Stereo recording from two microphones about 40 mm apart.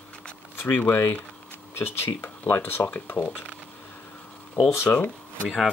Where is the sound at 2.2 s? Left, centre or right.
Left.